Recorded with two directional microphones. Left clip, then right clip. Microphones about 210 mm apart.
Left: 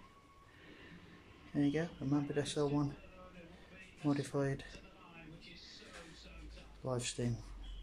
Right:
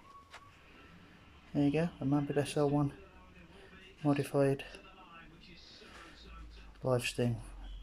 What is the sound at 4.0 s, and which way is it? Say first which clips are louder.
Speech: right 6 dB; 5° right (ahead or behind).